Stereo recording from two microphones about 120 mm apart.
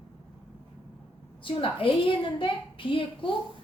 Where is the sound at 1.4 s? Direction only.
50° left (ahead or behind).